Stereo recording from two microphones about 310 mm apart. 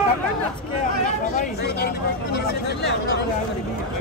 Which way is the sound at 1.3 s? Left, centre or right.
Left.